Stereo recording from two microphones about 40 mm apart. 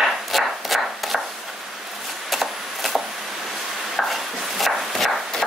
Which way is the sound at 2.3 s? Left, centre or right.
Centre.